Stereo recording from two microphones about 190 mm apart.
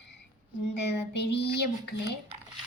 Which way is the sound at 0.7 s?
65° left (ahead or behind).